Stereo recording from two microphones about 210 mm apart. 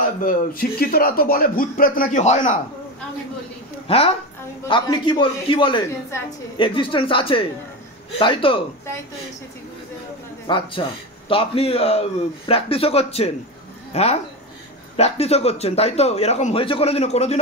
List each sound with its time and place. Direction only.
0.0 s speech: 40° left (ahead or behind)
3.8 s a man's voice: 30° left (ahead or behind)
10.4 s a man's voice: 25° left (ahead or behind)